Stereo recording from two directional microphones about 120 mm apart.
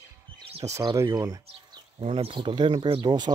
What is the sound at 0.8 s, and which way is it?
Speech, 30° right (ahead or behind).